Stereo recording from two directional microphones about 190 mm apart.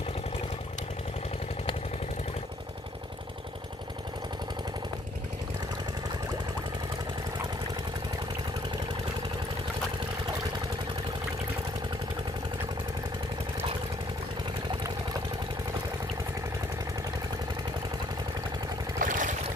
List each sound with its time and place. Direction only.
18.9 s vehicle: 40° right (ahead or behind)